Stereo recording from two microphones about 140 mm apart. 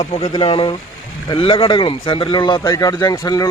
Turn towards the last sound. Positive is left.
turn(degrees=25)  # may be behind; listen again after turning